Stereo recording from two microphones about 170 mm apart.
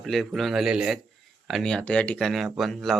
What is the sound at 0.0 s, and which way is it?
Speech, centre (ahead or behind).